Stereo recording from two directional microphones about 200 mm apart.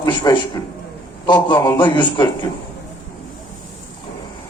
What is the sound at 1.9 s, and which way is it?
Speech, 25° left (ahead or behind).